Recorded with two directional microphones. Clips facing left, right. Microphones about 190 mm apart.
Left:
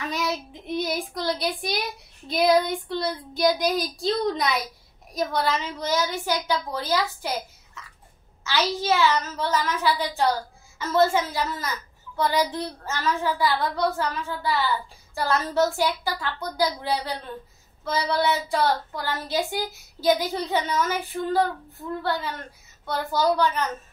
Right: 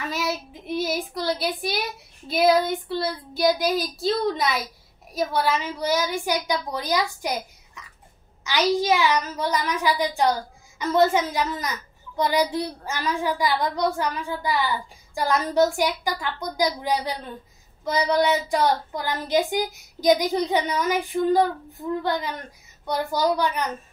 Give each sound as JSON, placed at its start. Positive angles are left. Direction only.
{"t": 0.1, "sound": "child singing", "side_deg": -5}
{"t": 5.1, "sound": "a woman's voice", "side_deg": -10}